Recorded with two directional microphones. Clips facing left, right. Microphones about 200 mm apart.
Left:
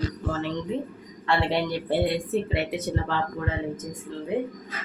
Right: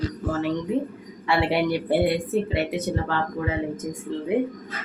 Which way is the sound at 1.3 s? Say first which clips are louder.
Right 3 dB; 10° right (ahead or behind).